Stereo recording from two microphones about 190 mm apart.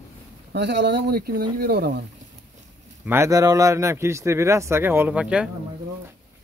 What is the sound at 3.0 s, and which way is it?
A man's voice, 10° right (ahead or behind).